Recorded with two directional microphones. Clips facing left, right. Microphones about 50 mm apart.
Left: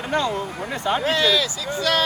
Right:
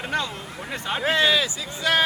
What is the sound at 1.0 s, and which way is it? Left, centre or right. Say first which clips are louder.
Speech: right 2 dB; right.